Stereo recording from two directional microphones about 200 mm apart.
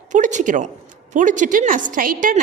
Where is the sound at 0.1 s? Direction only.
40° right (ahead or behind).